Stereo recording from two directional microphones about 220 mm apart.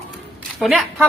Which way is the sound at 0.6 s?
Centre (ahead or behind).